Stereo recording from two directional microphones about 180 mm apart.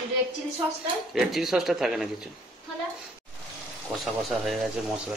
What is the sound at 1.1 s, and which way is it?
Speech, centre (ahead or behind).